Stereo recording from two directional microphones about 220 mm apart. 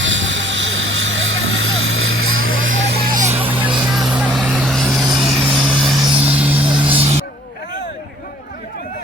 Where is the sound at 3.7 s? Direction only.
Centre (ahead or behind).